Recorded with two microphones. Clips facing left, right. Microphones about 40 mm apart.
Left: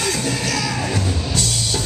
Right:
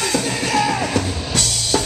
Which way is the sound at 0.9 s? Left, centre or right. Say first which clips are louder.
Right 1 dB; right.